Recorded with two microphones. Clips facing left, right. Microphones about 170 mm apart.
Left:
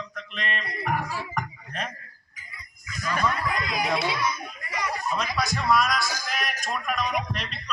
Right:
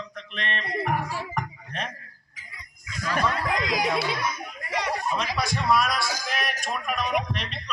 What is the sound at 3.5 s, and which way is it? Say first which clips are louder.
Chatter: right 3 dB; 90° right.